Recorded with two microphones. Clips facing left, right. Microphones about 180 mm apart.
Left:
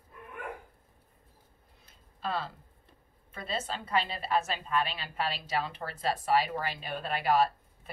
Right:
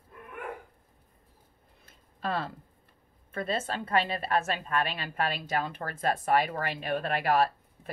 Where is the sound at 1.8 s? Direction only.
55° right (ahead or behind).